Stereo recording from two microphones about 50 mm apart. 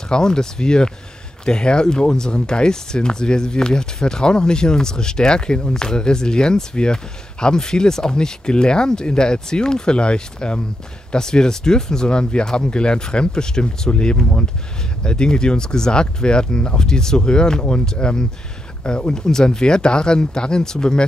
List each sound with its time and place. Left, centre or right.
0.1 s speech: centre